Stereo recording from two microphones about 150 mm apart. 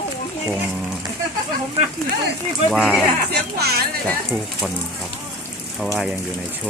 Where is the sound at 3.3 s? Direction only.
90° right.